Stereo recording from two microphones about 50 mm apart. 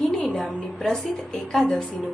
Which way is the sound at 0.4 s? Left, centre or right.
Centre.